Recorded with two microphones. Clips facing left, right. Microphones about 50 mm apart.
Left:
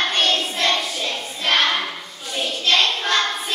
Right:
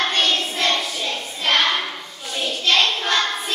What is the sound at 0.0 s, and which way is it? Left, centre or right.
Child singing, centre.